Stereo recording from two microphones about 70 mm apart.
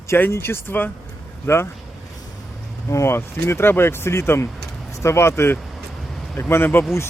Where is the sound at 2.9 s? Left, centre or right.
Left.